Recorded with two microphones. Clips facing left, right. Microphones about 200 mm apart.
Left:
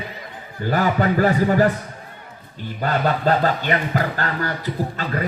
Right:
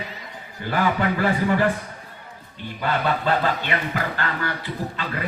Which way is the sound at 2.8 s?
40° left (ahead or behind).